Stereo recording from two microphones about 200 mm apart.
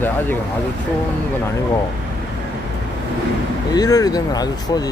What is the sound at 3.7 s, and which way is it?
Speech, 20° left (ahead or behind).